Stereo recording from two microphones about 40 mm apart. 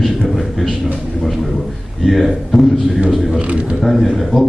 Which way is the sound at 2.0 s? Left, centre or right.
Centre.